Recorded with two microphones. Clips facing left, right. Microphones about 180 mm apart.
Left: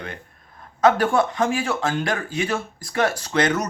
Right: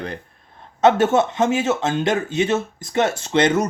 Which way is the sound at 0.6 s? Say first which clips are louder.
Right 3 dB; 25° right (ahead or behind).